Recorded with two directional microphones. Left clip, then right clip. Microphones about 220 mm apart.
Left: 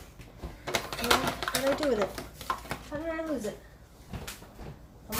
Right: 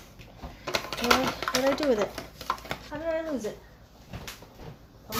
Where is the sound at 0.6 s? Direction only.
15° right (ahead or behind).